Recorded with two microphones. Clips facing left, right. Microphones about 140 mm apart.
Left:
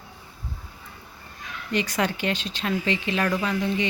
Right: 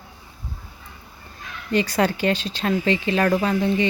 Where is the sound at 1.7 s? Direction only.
35° right (ahead or behind).